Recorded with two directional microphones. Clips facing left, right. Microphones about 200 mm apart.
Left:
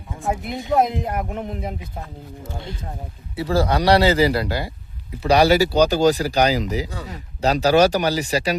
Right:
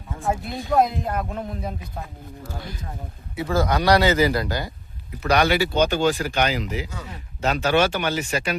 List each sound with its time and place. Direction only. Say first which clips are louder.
0.3 s speech: left 2 dB; 20° left (ahead or behind)